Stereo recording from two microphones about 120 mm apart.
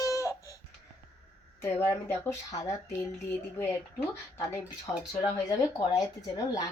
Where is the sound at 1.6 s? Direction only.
20° left (ahead or behind).